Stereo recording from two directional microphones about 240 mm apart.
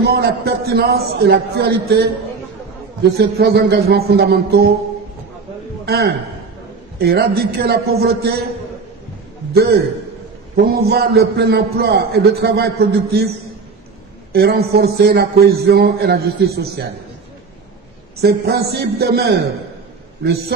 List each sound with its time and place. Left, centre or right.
0.0 s a man's voice: right
3.2 s a man's voice: right
5.9 s a man's voice: right
9.5 s a man's voice: right
14.3 s a man's voice: right
18.2 s a man's voice: right